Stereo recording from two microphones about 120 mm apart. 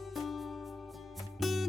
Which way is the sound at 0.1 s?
Centre (ahead or behind).